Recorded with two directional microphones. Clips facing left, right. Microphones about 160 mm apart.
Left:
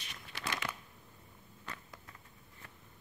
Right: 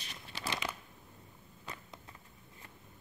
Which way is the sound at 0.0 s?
35° right (ahead or behind).